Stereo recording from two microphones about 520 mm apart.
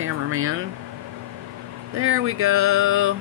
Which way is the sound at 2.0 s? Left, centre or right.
Right.